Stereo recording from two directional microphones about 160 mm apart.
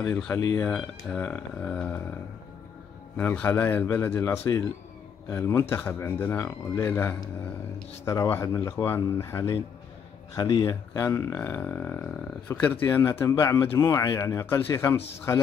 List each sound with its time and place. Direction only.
0.0 s speech: 5° left (ahead or behind)
3.2 s speech: 10° left (ahead or behind)